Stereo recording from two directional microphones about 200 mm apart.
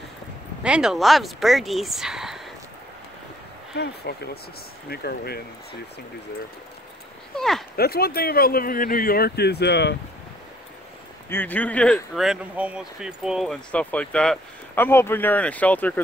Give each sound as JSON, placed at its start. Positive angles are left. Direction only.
{"t": 0.7, "sound": "speech", "side_deg": -5}
{"t": 3.7, "sound": "speech", "side_deg": 55}
{"t": 7.3, "sound": "speech", "side_deg": 0}
{"t": 7.7, "sound": "speech", "side_deg": 50}
{"t": 11.2, "sound": "speech", "side_deg": 10}